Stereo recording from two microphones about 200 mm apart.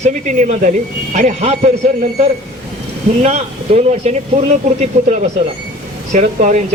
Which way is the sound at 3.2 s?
35° right (ahead or behind).